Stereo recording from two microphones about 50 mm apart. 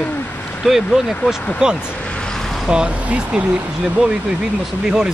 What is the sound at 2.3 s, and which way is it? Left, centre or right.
Vehicle, centre.